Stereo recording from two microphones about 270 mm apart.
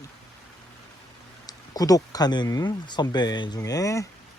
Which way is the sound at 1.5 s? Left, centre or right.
Centre.